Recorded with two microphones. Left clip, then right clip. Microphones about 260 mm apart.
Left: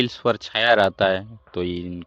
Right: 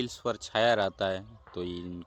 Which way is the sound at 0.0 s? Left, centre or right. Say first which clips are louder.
Left 11 dB; centre.